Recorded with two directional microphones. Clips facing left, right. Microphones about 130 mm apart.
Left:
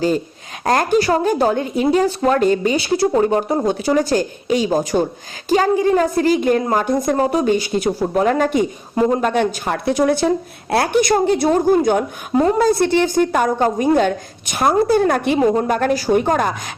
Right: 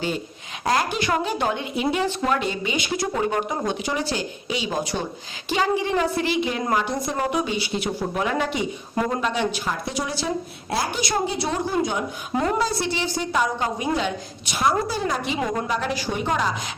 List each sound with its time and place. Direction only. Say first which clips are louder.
0.6 s speech: left 7 dB; 50° left (ahead or behind)
7.2 s speech: left 8 dB; 35° left (ahead or behind); by 15.4 s 60° left (ahead or behind)
15.4 s speech: left 10 dB; 30° left (ahead or behind)
15.6 s speech: left 8 dB; 50° left (ahead or behind)